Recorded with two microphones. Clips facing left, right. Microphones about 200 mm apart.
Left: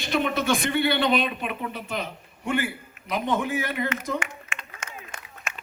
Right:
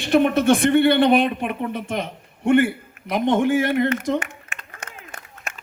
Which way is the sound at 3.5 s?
50° right (ahead or behind).